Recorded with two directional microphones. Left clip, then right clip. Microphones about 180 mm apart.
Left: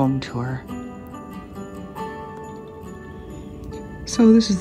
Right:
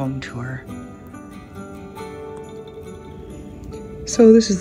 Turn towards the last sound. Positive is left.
turn(degrees=10)  # may be behind; listen again after turning